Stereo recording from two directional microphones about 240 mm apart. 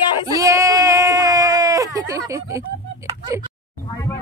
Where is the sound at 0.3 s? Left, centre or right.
Centre.